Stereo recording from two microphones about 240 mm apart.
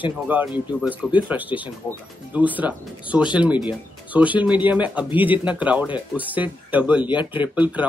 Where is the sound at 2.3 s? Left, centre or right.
Centre.